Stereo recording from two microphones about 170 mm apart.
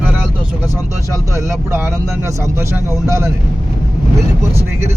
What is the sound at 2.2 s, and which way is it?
Speech, 15° right (ahead or behind).